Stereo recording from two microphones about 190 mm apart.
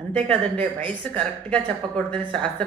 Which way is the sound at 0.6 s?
5° left (ahead or behind).